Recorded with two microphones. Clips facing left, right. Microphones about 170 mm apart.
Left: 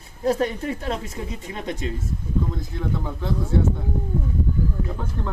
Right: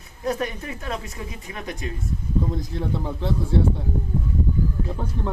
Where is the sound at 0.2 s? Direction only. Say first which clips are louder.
Left 4 dB; 30° left (ahead or behind).